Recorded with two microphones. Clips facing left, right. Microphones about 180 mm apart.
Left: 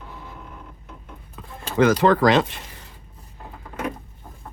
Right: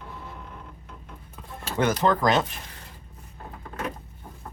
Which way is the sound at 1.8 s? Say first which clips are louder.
Left 6 dB; 90° left.